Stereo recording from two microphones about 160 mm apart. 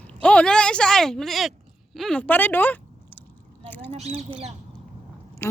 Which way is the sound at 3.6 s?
10° left (ahead or behind).